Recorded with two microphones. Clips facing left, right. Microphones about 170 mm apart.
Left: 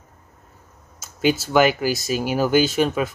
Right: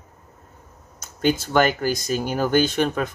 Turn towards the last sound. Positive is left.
turn(degrees=5)  # may be behind; listen again after turning